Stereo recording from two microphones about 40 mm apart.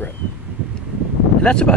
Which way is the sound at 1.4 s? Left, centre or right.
Left.